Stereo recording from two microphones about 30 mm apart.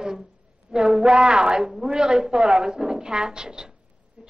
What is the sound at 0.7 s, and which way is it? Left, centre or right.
A woman's voice, right.